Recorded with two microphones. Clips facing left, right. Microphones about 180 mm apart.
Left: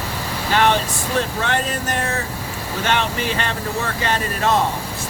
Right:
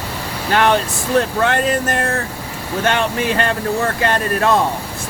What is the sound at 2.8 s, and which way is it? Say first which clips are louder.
Speech: right 4 dB; 50° right (ahead or behind).